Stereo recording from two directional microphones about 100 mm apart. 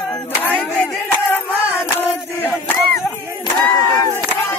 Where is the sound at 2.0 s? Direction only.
15° left (ahead or behind).